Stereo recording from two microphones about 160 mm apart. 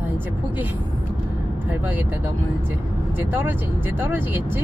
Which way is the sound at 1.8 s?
10° right (ahead or behind).